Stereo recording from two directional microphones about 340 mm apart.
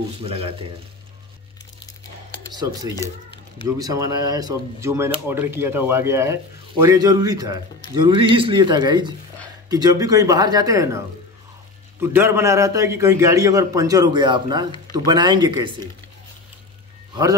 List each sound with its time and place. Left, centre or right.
0.2 s speech: centre
3.6 s speech: centre
12.0 s speech: centre
17.1 s speech: centre